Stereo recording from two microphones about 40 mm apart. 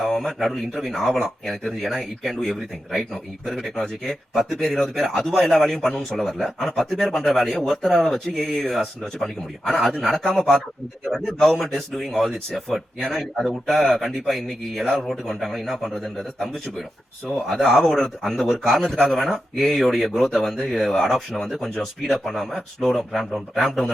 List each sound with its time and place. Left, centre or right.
0.0 s speech: centre
10.2 s speech: centre